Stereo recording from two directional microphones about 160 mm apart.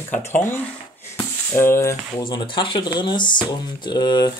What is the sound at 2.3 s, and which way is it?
Speech, 30° left (ahead or behind).